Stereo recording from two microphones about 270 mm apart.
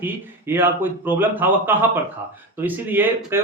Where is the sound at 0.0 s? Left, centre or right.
Centre.